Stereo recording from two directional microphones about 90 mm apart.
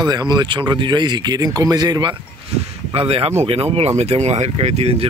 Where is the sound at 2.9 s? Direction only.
90° right.